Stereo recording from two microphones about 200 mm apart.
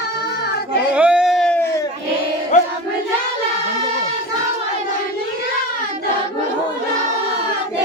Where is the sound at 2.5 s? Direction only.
35° left (ahead or behind).